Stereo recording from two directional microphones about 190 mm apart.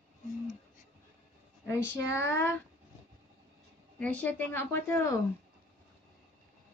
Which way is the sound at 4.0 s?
10° left (ahead or behind).